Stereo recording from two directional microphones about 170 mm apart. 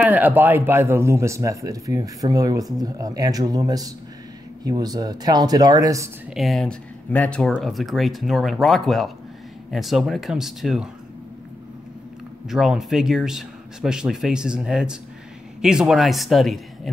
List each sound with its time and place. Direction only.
0.0 s speech: 10° right (ahead or behind)
6.3 s speech: centre (ahead or behind)
12.4 s speech: centre (ahead or behind)